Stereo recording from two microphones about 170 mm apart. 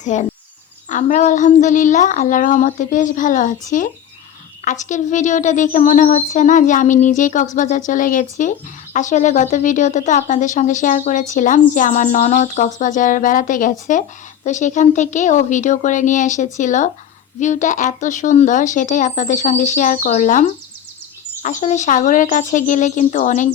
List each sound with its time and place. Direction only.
0.0 s speech: 45° left (ahead or behind)